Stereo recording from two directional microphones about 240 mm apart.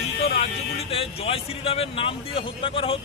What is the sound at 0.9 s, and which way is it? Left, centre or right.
Speech, left.